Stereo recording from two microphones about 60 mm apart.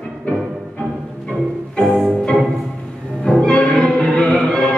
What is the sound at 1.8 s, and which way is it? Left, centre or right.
Music, centre.